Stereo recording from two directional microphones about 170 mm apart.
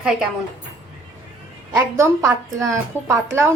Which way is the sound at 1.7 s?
20° right (ahead or behind).